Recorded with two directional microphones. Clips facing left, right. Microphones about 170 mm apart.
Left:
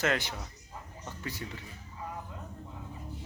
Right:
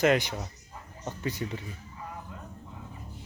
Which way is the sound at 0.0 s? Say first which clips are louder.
Right 7 dB; 15° right (ahead or behind).